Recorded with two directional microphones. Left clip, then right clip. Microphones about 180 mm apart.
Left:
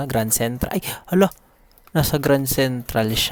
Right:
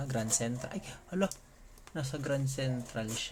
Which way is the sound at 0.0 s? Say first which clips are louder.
Left 13 dB; 50° left (ahead or behind).